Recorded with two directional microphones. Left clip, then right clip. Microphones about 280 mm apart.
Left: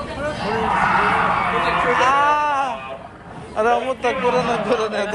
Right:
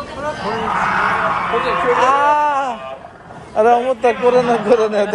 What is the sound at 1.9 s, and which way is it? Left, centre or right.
Wail, right.